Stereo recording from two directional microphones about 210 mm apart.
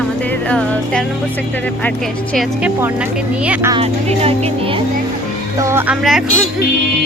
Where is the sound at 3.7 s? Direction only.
30° right (ahead or behind).